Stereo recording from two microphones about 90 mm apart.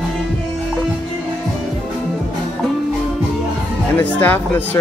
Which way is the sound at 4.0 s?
20° left (ahead or behind).